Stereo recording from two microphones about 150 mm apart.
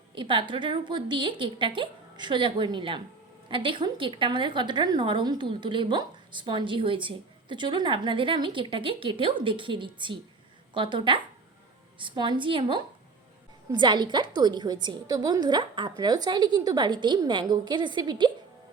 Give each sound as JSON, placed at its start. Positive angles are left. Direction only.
{"t": 0.1, "sound": "a woman's voice", "side_deg": -35}